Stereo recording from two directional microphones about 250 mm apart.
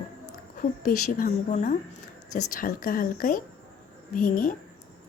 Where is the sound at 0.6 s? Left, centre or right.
Left.